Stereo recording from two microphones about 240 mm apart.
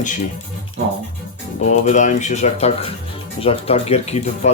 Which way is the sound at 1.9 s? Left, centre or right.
Left.